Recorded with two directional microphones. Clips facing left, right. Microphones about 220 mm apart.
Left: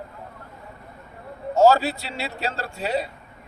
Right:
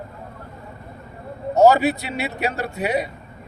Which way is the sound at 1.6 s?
20° right (ahead or behind).